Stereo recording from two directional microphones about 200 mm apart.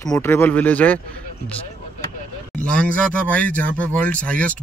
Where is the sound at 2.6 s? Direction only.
5° left (ahead or behind).